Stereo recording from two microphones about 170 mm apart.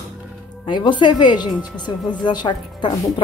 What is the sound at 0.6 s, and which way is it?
A woman's voice, 25° left (ahead or behind).